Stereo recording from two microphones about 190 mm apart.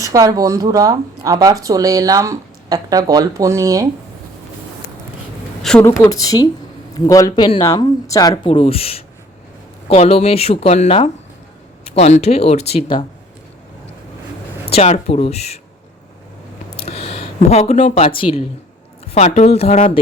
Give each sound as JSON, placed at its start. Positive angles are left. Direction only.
{"t": 0.0, "sound": "speech", "side_deg": -15}
{"t": 5.6, "sound": "a woman's voice", "side_deg": 5}
{"t": 14.7, "sound": "speech", "side_deg": 35}
{"t": 16.8, "sound": "speech", "side_deg": 30}